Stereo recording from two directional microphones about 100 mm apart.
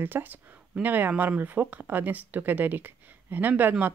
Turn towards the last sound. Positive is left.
turn(degrees=-20)  # may be behind; listen again after turning